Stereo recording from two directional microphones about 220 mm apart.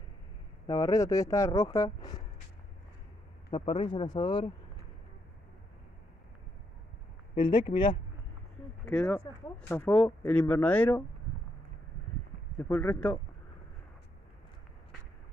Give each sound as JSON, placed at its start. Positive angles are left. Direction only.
{"t": 0.7, "sound": "speech", "side_deg": 15}
{"t": 3.4, "sound": "speech", "side_deg": 25}
{"t": 7.3, "sound": "speech", "side_deg": 20}
{"t": 8.8, "sound": "speech", "side_deg": 5}
{"t": 12.5, "sound": "speech", "side_deg": 10}